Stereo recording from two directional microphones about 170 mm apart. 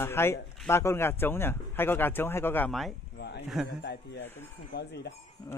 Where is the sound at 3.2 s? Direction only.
80° left.